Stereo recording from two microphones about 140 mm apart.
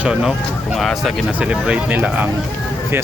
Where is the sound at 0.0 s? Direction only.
5° right (ahead or behind).